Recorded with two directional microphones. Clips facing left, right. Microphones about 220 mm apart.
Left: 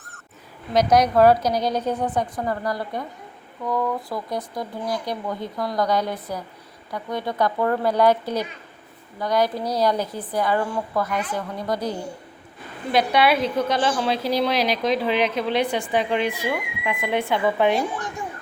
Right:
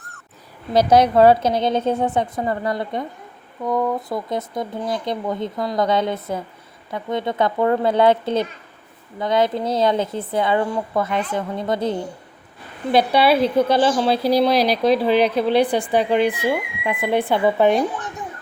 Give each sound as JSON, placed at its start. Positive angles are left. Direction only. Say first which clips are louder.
{"t": 0.7, "sound": "a woman's voice", "louder": "right 3 dB", "side_deg": -30}